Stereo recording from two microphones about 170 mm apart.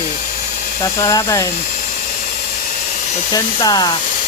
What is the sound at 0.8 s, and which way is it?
Speech, 20° left (ahead or behind).